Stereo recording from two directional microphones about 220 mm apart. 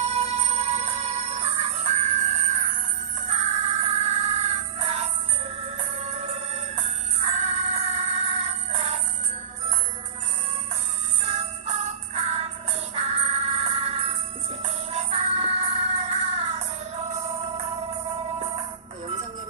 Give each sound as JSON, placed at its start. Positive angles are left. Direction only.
{"t": 0.0, "sound": "music", "side_deg": -30}
{"t": 6.1, "sound": "music", "side_deg": -25}
{"t": 11.2, "sound": "jingle bell", "side_deg": -30}
{"t": 13.0, "sound": "music", "side_deg": -30}